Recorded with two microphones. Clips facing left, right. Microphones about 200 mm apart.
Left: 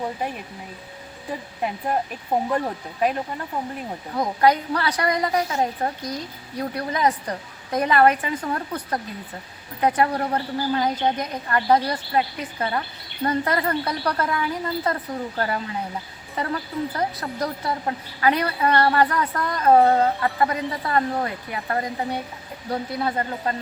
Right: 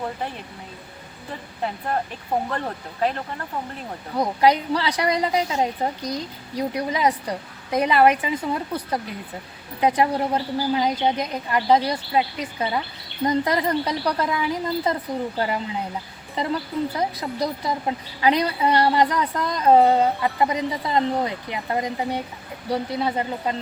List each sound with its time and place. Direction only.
2.5 s speech: 10° left (ahead or behind)
4.2 s a woman's voice: 10° right (ahead or behind)